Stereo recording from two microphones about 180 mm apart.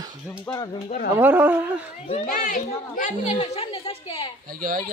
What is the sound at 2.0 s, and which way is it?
Speech, 35° left (ahead or behind).